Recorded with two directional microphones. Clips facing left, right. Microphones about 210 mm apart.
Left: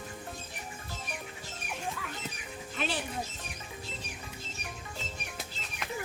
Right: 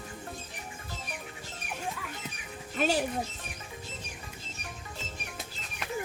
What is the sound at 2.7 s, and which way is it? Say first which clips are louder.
Speech: right 7 dB; 45° right (ahead or behind).